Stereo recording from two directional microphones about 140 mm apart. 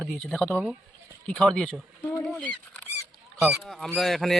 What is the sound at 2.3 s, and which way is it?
Rodents, 10° left (ahead or behind).